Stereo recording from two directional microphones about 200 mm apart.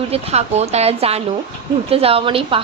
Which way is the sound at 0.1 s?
30° right (ahead or behind).